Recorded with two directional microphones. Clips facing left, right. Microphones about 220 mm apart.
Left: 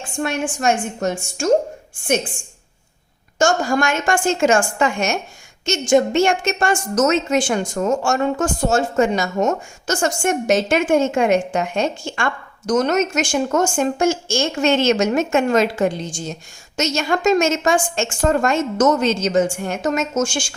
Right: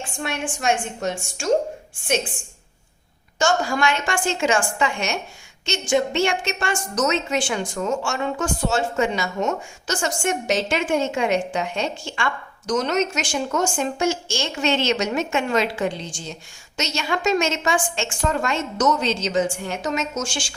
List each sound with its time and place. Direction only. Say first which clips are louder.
0.2 s a woman's voice: left 6 dB; 45° left (ahead or behind)
3.3 s a woman's voice: left 4 dB; 45° left (ahead or behind)